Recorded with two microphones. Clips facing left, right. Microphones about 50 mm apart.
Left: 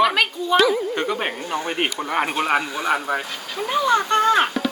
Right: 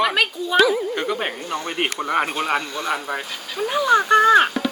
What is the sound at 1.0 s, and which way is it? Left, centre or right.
Speech, centre.